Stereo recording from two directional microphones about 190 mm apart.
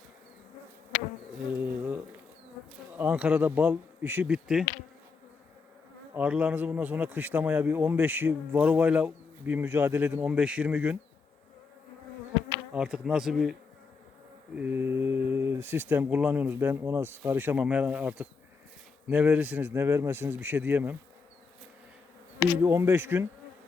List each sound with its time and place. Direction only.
2.9 s a man's voice: 10° right (ahead or behind)
6.1 s a man's voice: 5° right (ahead or behind)
12.7 s a man's voice: 5° right (ahead or behind)
22.5 s a man's voice: 15° right (ahead or behind)